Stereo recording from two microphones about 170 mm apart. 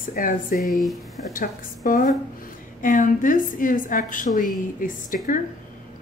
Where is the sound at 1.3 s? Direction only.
55° left (ahead or behind).